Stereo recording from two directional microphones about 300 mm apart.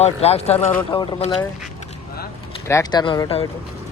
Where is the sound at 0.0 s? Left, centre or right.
Left.